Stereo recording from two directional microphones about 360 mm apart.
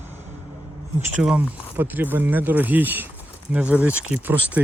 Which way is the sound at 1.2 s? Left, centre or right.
Centre.